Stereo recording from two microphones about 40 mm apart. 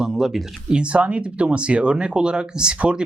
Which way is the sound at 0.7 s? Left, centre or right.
Right.